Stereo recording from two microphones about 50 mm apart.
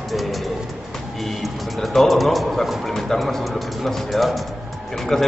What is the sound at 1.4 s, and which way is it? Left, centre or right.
A man's voice, centre.